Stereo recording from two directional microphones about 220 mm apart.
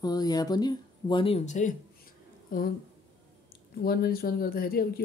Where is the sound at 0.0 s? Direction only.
15° left (ahead or behind); by 2.7 s 40° left (ahead or behind).